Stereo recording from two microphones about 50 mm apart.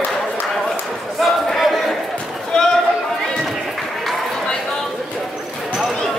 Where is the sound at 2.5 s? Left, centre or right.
Centre.